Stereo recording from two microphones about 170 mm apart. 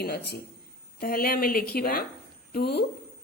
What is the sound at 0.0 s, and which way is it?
Speech, 70° left (ahead or behind).